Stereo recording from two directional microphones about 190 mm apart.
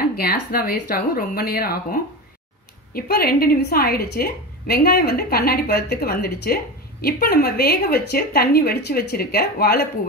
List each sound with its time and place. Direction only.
0.0 s a woman's voice: 50° left (ahead or behind)